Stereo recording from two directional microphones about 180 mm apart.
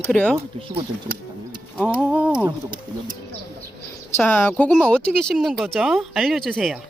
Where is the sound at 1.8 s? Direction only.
5° right (ahead or behind).